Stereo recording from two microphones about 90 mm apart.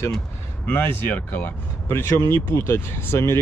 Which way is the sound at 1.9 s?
30° left (ahead or behind).